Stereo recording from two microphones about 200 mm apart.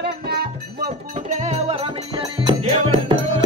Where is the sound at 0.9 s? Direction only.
35° right (ahead or behind).